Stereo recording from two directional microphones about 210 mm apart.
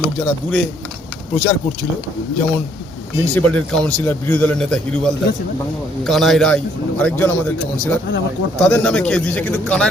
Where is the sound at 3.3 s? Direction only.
5° left (ahead or behind).